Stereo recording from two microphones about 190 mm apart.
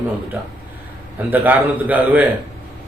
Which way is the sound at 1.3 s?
10° right (ahead or behind).